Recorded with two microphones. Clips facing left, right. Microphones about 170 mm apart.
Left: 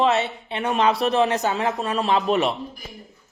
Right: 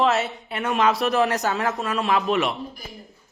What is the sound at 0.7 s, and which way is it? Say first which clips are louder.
A man's voice: left 1 dB; 35° left (ahead or behind).